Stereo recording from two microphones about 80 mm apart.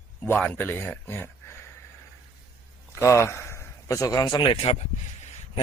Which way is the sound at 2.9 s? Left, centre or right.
Left.